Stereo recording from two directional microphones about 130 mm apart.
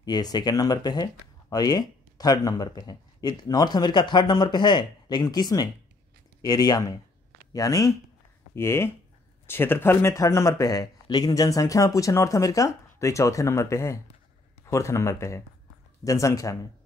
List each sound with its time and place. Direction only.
0.0 s speech: 30° left (ahead or behind)